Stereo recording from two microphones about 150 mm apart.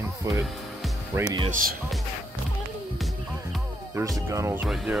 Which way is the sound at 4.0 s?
20° right (ahead or behind).